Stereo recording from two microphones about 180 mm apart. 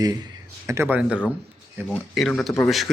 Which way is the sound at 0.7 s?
10° right (ahead or behind).